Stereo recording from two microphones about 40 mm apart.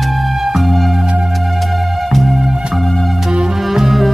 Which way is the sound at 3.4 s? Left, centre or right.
Centre.